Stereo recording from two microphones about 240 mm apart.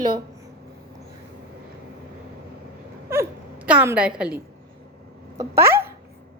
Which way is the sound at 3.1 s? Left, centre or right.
Centre.